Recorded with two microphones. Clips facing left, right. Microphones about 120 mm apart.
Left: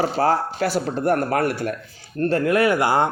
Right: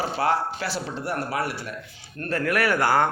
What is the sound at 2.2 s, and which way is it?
Speech, 25° left (ahead or behind).